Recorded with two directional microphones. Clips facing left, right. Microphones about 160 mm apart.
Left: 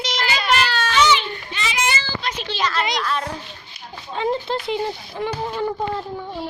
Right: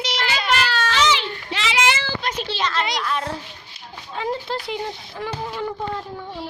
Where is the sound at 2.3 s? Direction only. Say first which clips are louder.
Left 2 dB; 30° right (ahead or behind).